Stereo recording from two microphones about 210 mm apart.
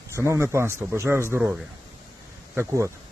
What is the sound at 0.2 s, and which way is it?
Speech, 10° right (ahead or behind).